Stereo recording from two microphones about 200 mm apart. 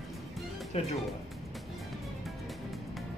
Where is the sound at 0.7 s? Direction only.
35° left (ahead or behind).